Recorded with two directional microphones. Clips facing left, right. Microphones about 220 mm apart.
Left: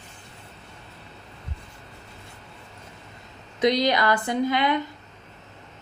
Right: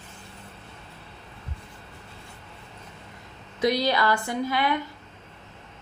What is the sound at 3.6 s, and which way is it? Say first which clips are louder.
Speech: left 2 dB; 20° left (ahead or behind).